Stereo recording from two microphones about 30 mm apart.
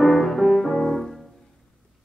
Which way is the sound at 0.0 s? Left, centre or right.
Centre.